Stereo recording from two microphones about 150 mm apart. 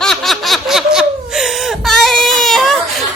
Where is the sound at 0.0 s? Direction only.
Centre (ahead or behind).